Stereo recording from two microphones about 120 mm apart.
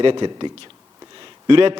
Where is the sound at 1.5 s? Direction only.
45° right (ahead or behind).